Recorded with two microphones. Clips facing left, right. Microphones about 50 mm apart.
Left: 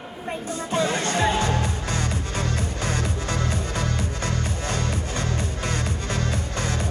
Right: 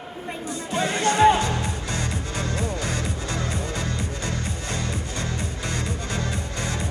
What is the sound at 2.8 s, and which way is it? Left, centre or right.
Music, left.